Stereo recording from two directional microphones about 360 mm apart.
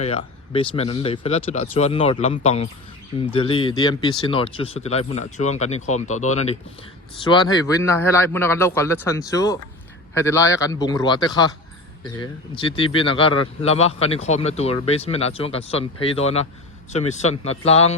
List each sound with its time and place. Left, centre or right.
0.0 s speech: centre